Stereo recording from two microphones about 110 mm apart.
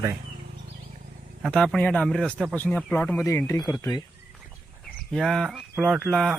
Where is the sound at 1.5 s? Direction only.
10° left (ahead or behind).